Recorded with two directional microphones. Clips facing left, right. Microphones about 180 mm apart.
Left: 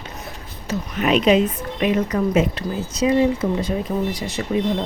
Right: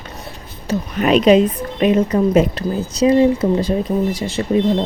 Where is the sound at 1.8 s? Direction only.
30° right (ahead or behind).